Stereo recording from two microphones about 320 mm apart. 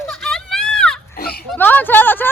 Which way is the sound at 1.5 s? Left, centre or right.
Centre.